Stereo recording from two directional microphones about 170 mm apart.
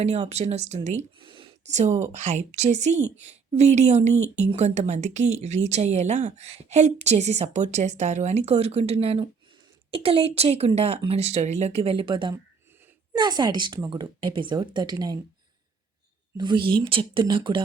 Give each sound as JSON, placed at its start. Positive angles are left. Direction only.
{"t": 0.0, "sound": "a woman's voice", "side_deg": -40}
{"t": 1.3, "sound": "a sound", "side_deg": -30}
{"t": 1.6, "sound": "a woman's voice", "side_deg": -45}
{"t": 16.4, "sound": "speech", "side_deg": -30}